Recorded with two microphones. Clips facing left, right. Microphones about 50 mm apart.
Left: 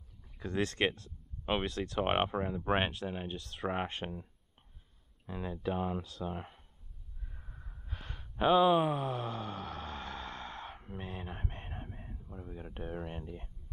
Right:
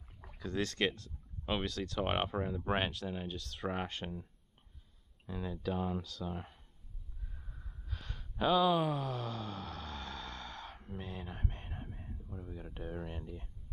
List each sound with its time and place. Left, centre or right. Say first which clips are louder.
0.4 s speech: left 2 dB; left
5.2 s speech: left 2 dB; left
7.3 s snort: left 2 dB; centre
7.8 s a sound: left 1 dB; left
12.2 s speech: left 1 dB; centre